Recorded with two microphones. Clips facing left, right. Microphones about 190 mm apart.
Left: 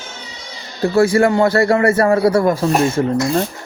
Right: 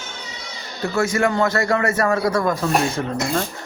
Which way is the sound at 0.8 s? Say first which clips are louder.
Left 7 dB; 30° left (ahead or behind).